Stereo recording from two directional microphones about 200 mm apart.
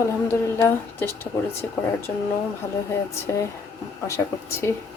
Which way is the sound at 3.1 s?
15° left (ahead or behind).